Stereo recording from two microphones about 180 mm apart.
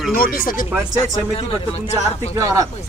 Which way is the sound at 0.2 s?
55° left (ahead or behind).